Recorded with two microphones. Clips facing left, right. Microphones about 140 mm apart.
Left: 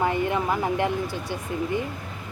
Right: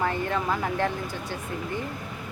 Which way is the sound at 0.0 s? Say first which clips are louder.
Left 3 dB; 15° left (ahead or behind).